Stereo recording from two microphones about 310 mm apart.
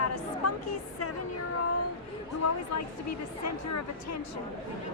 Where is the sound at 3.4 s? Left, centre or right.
Left.